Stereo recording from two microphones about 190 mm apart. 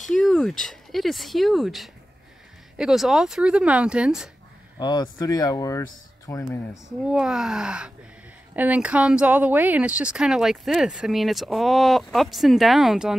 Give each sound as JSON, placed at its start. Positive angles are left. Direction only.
{"t": 0.1, "sound": "speech", "side_deg": 0}
{"t": 4.7, "sound": "speech", "side_deg": 20}
{"t": 6.9, "sound": "speech", "side_deg": -5}